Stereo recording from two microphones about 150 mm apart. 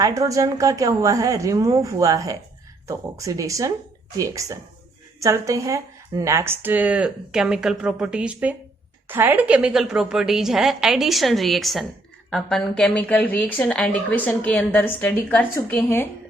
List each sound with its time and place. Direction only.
0.0 s a woman's voice: 20° right (ahead or behind); by 16.0 s 15° left (ahead or behind)